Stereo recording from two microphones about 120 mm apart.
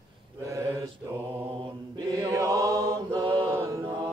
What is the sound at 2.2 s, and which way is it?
Chant, 25° right (ahead or behind).